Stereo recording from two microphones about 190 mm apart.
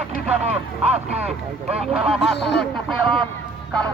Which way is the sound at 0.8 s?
35° right (ahead or behind).